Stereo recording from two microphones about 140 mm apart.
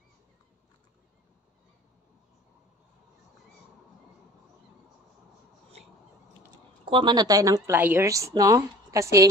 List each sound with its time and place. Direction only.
6.9 s a woman's voice: 35° right (ahead or behind)